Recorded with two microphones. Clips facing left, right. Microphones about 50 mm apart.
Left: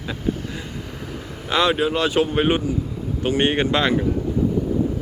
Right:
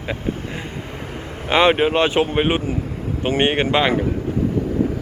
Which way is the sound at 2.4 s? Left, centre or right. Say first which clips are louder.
Even; centre.